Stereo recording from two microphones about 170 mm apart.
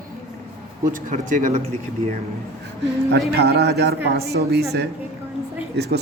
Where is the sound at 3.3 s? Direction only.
75° right (ahead or behind).